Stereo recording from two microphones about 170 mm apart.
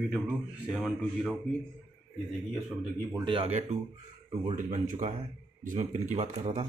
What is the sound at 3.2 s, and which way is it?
Speech, 30° right (ahead or behind).